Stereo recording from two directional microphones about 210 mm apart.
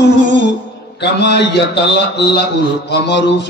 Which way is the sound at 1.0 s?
55° left (ahead or behind).